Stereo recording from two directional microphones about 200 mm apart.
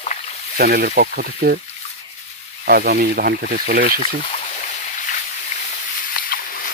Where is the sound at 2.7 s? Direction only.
50° right (ahead or behind).